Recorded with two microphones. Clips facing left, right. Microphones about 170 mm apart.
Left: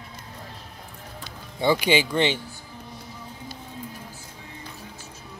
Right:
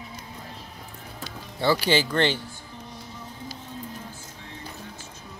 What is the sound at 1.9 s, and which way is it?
Speech, 10° left (ahead or behind).